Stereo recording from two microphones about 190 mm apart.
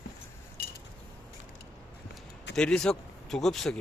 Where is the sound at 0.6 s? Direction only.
55° left (ahead or behind).